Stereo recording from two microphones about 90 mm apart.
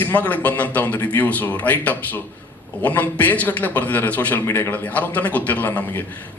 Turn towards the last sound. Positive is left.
turn(degrees=20)  # may be behind; listen again after turning